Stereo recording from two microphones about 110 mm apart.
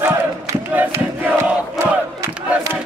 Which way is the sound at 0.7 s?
15° right (ahead or behind).